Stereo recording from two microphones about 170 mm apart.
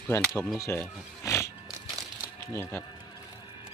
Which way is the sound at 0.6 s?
15° left (ahead or behind).